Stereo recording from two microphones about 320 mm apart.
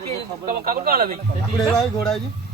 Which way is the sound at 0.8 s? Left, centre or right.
Right.